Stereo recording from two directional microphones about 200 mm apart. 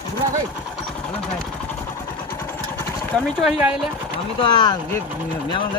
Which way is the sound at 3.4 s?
5° right (ahead or behind).